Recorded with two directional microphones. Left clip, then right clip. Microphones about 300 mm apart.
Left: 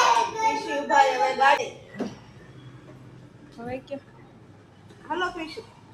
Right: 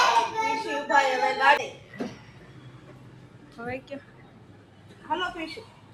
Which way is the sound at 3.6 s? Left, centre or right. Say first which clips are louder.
Left 1 dB; centre.